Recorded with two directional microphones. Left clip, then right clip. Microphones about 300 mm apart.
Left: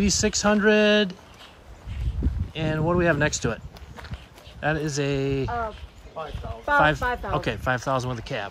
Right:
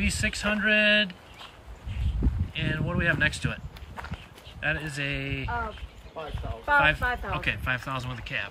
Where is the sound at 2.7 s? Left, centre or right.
Right.